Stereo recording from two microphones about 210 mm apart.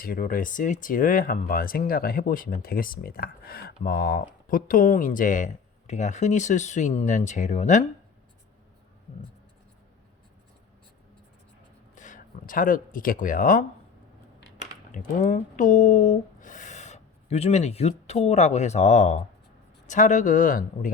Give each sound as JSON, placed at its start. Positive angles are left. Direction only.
{"t": 0.0, "sound": "speech", "side_deg": 40}
{"t": 11.9, "sound": "speech", "side_deg": 40}
{"t": 14.9, "sound": "speech", "side_deg": 40}